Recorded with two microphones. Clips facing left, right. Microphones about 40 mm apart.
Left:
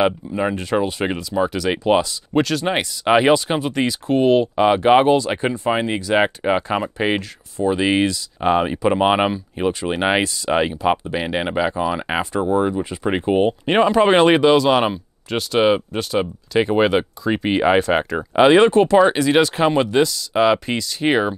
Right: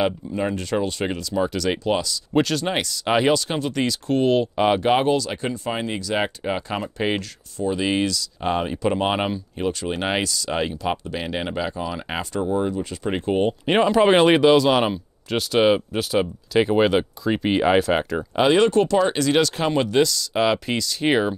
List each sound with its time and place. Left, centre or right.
0.0 s speech: centre
1.9 s speech: left
2.3 s speech: centre
2.6 s speech: centre
13.7 s speech: centre
18.1 s speech: left